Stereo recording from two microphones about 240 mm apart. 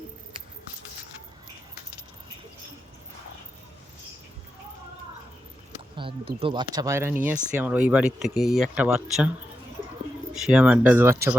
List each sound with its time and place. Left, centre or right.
6.0 s speech: right; by 9.3 s centre
10.3 s speech: centre